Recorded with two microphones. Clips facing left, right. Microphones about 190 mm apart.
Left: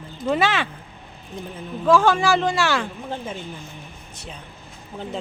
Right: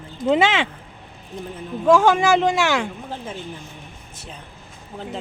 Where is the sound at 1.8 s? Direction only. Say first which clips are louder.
Right 2 dB; 15° right (ahead or behind).